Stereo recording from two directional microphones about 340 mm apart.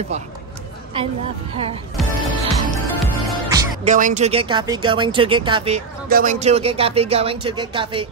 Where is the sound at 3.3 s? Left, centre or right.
Centre.